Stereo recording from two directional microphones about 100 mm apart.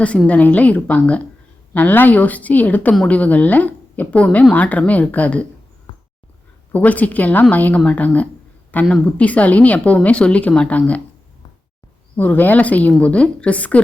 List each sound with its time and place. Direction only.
0.3 s a woman's voice: 15° left (ahead or behind)
6.7 s a woman's voice: 15° left (ahead or behind)
12.1 s a woman's voice: 20° left (ahead or behind)